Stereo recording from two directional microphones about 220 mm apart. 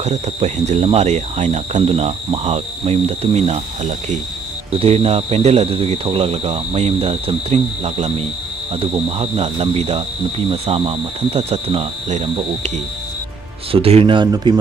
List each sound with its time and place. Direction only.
0.0 s speech: 30° right (ahead or behind)